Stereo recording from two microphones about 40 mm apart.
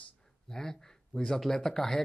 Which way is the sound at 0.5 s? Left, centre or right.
Centre.